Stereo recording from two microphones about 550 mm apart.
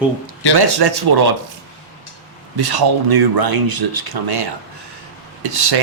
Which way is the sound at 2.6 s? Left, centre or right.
Right.